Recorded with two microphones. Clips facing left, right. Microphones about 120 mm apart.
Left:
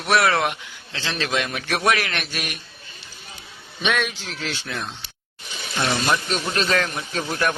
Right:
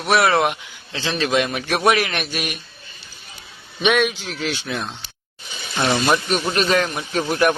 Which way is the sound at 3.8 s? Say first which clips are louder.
Right 6 dB; 15° right (ahead or behind).